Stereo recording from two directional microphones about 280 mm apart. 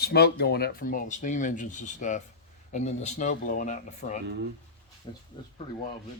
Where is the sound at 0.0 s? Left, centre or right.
Left; by 5.2 s centre.